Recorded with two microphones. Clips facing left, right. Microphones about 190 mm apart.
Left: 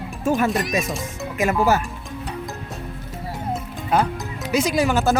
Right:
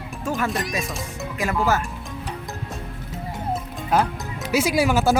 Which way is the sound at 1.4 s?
20° left (ahead or behind).